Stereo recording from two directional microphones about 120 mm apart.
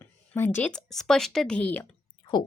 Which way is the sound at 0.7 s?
5° left (ahead or behind).